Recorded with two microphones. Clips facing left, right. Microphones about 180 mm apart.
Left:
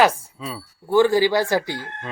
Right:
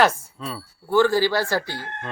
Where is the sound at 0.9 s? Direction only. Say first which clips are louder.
Left 2 dB; 15° left (ahead or behind).